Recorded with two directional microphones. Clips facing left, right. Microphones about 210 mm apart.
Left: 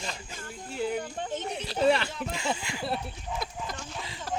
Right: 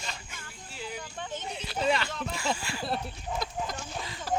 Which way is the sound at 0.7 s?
55° left (ahead or behind).